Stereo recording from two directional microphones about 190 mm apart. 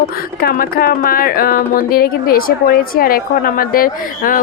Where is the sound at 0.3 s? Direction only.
50° left (ahead or behind).